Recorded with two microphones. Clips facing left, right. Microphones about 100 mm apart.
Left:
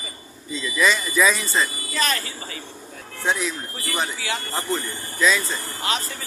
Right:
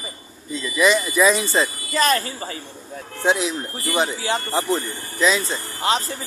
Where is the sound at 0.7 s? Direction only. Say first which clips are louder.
Right 3 dB; 15° right (ahead or behind).